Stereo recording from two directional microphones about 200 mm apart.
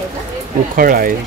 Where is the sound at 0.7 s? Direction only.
45° right (ahead or behind).